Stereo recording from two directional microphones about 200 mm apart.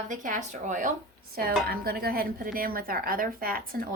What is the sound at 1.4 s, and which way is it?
A woman's voice, 50° right (ahead or behind).